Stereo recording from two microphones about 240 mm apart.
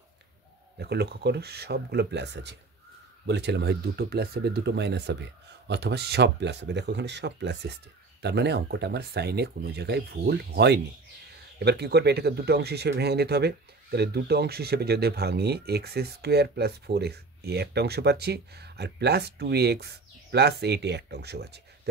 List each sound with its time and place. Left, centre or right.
0.7 s speech: right